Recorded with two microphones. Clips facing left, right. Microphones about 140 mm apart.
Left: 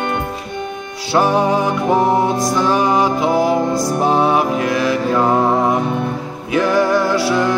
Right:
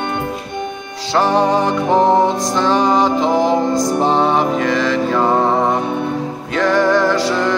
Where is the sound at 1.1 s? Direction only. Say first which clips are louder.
Even; 10° left (ahead or behind).